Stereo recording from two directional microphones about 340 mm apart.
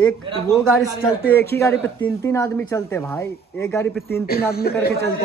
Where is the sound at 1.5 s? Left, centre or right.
Centre.